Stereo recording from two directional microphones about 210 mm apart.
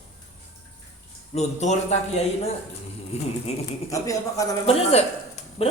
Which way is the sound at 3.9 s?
15° left (ahead or behind).